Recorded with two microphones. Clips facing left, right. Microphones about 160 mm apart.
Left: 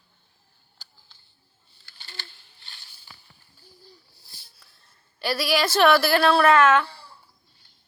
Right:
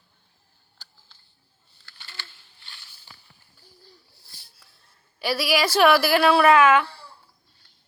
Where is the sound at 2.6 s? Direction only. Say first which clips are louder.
Right 2 dB; 35° left (ahead or behind).